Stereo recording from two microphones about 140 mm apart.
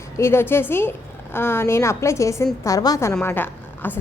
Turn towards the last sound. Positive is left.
turn(degrees=15)  # may be behind; listen again after turning